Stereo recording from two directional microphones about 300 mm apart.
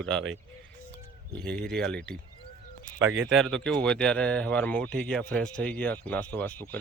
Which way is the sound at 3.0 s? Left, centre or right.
Right.